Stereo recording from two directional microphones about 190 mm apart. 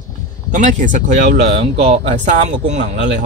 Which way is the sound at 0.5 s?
40° right (ahead or behind).